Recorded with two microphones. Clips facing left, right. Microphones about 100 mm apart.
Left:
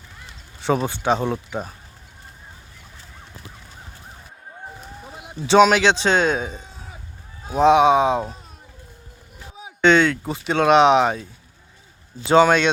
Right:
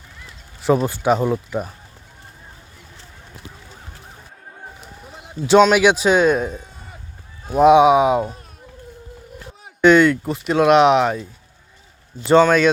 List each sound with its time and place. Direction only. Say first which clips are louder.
0.6 s speech: right 4 dB; centre (ahead or behind)
5.1 s a sound: right 2 dB; 5° left (ahead or behind)
5.7 s speech: right 3 dB; 10° right (ahead or behind)
7.6 s speech: right 3 dB; 10° right (ahead or behind)
9.8 s speech: right 4 dB; 5° right (ahead or behind)
12.3 s speech: right 1 dB; 5° left (ahead or behind)